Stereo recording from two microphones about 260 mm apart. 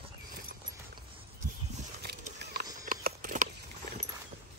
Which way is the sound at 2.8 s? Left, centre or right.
Right.